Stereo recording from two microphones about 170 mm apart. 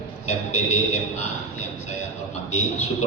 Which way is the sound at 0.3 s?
40° left (ahead or behind).